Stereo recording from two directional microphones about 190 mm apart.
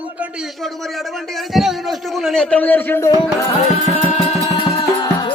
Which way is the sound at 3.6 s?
35° left (ahead or behind).